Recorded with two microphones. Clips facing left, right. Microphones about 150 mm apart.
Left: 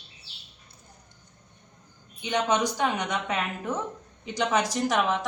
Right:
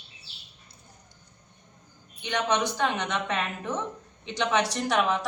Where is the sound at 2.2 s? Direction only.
15° left (ahead or behind).